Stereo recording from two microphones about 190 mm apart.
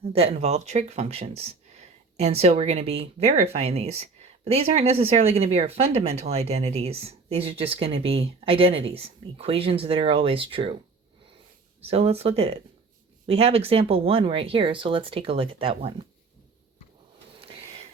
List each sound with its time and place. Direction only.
0.0 s speech: 30° right (ahead or behind)
11.8 s speech: 30° right (ahead or behind)
17.4 s a sound: 30° right (ahead or behind)